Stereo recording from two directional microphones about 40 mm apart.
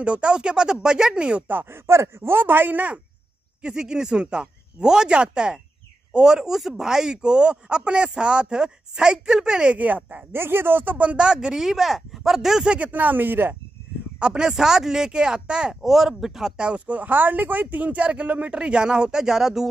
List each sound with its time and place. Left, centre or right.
0.0 s speech: right
1.7 s speech: right
2.4 s speech: right
3.6 s speech: centre
9.8 s speech: right
10.3 s speech: right
11.0 s speech: right; by 12.6 s centre
12.6 s speech: right
12.9 s speech: right
14.2 s speech: right
14.5 s speech: centre
15.7 s speech: centre
16.5 s speech: right; by 19.7 s centre